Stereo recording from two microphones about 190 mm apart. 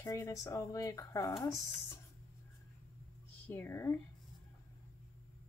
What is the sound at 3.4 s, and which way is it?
Speech, 10° left (ahead or behind).